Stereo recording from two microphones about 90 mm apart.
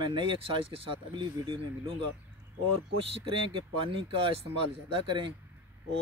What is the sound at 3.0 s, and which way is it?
Speech, 75° right (ahead or behind).